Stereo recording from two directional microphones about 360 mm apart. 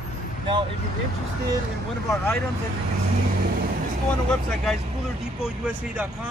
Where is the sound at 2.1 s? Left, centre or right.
Centre.